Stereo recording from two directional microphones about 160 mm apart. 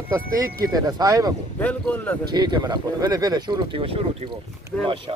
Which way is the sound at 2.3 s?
25° right (ahead or behind).